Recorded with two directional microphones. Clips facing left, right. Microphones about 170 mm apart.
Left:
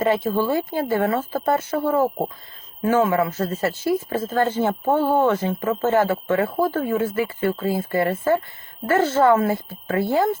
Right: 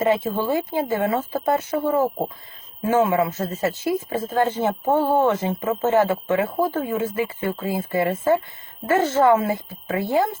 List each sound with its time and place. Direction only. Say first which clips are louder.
0.0 s speech: left 1 dB; 20° right (ahead or behind)